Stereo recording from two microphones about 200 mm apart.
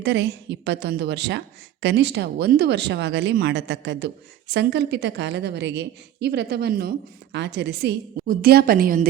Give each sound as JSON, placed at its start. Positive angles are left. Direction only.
{"t": 0.0, "sound": "a woman's voice", "side_deg": -60}